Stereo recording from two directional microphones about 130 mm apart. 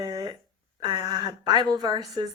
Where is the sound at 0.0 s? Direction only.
30° right (ahead or behind).